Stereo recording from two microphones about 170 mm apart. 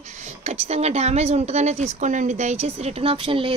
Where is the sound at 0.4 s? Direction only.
40° right (ahead or behind).